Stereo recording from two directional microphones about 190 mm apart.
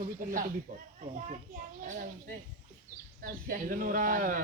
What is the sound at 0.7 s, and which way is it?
A child's voice, 40° right (ahead or behind).